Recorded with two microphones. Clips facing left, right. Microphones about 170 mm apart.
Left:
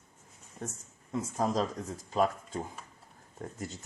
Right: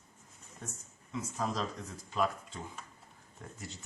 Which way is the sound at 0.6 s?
45° left (ahead or behind).